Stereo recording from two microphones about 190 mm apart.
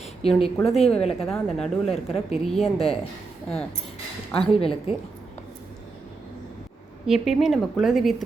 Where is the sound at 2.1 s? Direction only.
Centre (ahead or behind).